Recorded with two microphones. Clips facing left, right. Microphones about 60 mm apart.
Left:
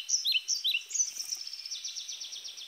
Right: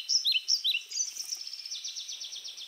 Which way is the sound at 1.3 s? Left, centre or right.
Left.